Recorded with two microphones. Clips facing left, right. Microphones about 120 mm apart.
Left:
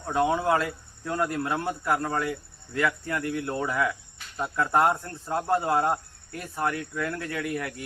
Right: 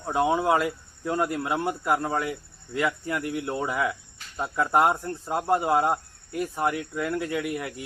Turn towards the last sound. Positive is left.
turn(degrees=-15)  # may be behind; listen again after turning